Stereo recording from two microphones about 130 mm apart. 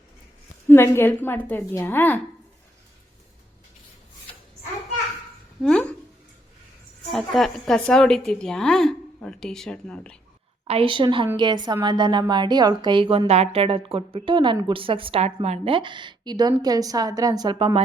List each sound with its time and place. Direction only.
0.7 s a woman's voice: 15° left (ahead or behind)
5.6 s speech: 10° left (ahead or behind)
7.1 s a woman's voice: centre (ahead or behind)
10.7 s a woman's voice: 45° right (ahead or behind)
15.7 s a woman's voice: 40° right (ahead or behind)